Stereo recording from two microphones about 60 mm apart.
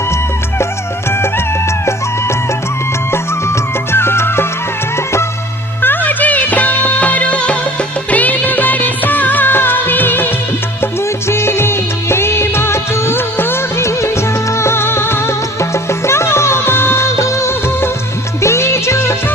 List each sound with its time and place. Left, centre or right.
3.1 s music: left
5.8 s music: left
11.3 s music of bollywood: left
18.4 s music: left